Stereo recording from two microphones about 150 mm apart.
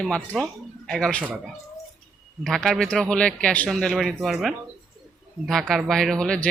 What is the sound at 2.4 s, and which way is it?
Speech, 5° left (ahead or behind).